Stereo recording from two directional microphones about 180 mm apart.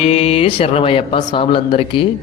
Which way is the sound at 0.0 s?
35° left (ahead or behind).